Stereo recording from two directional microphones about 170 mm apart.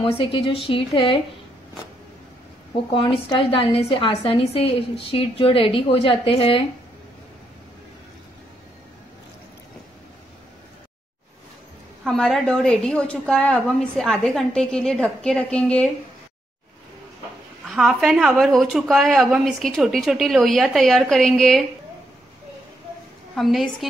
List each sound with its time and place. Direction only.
0.0 s a woman's voice: 30° left (ahead or behind)
2.9 s a woman's voice: 30° left (ahead or behind)
12.0 s a woman's voice: centre (ahead or behind)
17.6 s a woman's voice: centre (ahead or behind)
23.3 s a woman's voice: centre (ahead or behind)